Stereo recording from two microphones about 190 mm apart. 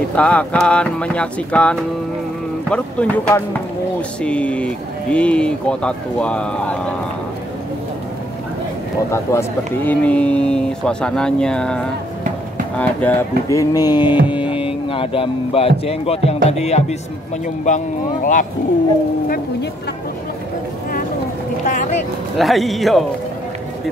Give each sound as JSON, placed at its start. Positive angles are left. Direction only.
{"t": 0.1, "sound": "speech", "side_deg": 5}
{"t": 9.1, "sound": "speech", "side_deg": 15}
{"t": 14.2, "sound": "hum", "side_deg": -5}
{"t": 14.9, "sound": "speech", "side_deg": 30}
{"t": 21.6, "sound": "speech", "side_deg": 40}
{"t": 22.4, "sound": "speech", "side_deg": 0}